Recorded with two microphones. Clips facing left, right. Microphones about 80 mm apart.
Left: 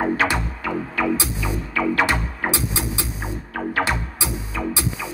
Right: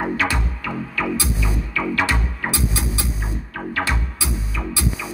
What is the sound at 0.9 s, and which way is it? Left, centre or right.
Music, left.